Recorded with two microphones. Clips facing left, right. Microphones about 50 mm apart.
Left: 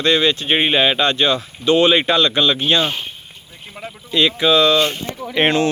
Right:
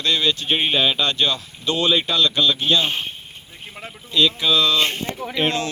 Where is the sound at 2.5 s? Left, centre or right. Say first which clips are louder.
Left 2 dB; left.